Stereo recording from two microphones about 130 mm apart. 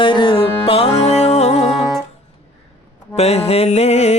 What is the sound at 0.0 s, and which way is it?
Music, 40° left (ahead or behind).